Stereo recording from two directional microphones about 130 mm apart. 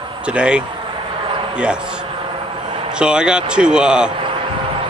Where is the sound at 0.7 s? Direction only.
40° right (ahead or behind).